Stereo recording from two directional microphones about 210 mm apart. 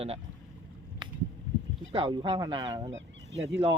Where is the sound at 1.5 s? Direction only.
35° left (ahead or behind).